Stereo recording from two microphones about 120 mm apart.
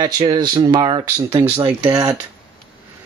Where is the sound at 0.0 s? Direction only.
35° right (ahead or behind).